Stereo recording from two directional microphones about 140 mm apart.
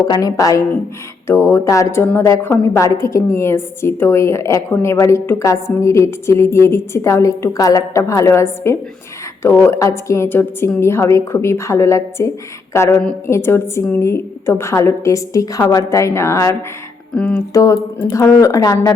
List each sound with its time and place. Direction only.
0.1 s a woman's voice: 25° left (ahead or behind)